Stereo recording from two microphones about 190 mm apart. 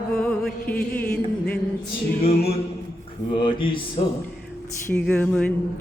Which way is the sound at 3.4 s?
25° left (ahead or behind).